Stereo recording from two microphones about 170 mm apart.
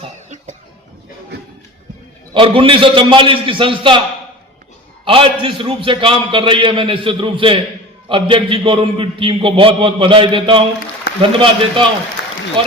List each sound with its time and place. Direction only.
0.0 s cough: 45° right (ahead or behind)
2.3 s a man's voice: 30° right (ahead or behind)
5.0 s a man's voice: 30° right (ahead or behind)
12.2 s applause: 90° left